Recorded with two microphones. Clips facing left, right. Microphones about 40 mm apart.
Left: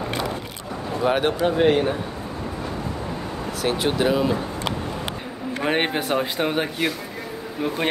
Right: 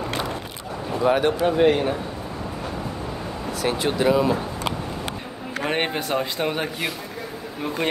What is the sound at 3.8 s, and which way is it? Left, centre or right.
Speech, centre.